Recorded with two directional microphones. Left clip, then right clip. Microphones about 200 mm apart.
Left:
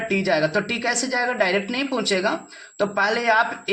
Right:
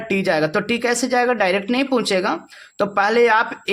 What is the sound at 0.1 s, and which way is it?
Speech, 55° right (ahead or behind).